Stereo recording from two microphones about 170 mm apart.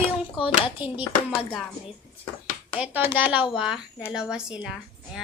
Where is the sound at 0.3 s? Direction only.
30° left (ahead or behind).